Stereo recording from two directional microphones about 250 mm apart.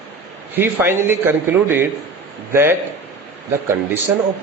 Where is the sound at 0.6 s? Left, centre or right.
Centre.